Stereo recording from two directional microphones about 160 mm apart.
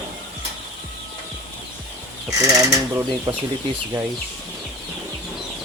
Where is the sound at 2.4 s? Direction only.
20° right (ahead or behind).